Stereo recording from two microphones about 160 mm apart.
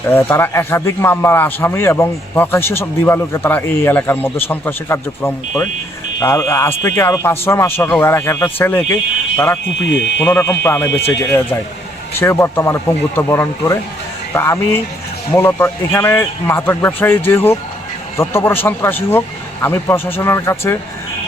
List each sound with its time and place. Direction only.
0.1 s a man's voice: 15° left (ahead or behind)
10.2 s a man's voice: 15° left (ahead or behind)